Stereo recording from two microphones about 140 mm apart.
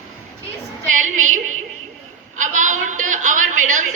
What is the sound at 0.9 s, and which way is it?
Female singing, 65° right (ahead or behind).